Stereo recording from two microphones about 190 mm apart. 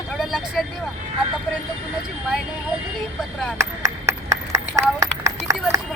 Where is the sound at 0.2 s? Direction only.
Centre (ahead or behind).